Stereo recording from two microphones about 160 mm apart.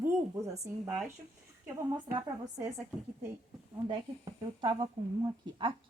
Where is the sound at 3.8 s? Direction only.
30° right (ahead or behind).